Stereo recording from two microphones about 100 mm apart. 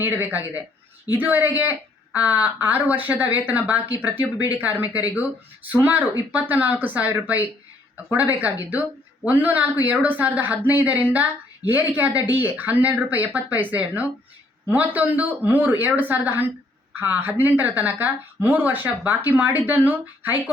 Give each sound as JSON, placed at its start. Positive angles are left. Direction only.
{"t": 0.0, "sound": "speech", "side_deg": -20}